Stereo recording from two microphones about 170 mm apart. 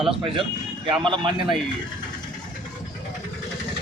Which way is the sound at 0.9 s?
30° right (ahead or behind).